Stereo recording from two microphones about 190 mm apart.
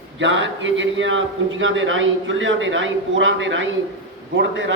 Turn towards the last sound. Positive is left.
turn(degrees=-70)  # may be behind; listen again after turning